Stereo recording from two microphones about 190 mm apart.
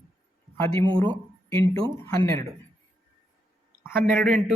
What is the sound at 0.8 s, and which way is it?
Speech, 25° right (ahead or behind).